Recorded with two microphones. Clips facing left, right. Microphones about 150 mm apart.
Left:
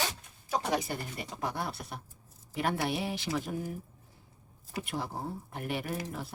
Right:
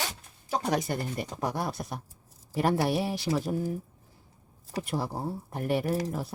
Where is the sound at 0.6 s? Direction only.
40° right (ahead or behind).